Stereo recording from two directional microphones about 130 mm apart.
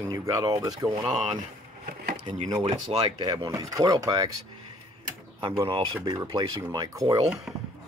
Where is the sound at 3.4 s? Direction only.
25° right (ahead or behind).